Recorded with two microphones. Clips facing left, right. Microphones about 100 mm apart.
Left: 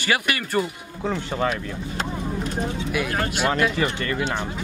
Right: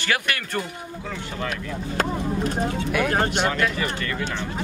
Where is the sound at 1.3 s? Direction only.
40° left (ahead or behind).